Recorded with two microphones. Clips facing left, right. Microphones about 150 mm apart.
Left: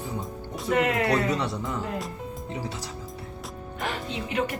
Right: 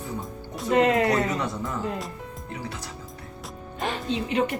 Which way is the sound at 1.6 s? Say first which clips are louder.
Right 1 dB; centre (ahead or behind).